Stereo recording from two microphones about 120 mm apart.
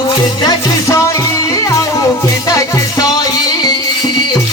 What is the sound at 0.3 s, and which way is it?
Music, 30° left (ahead or behind).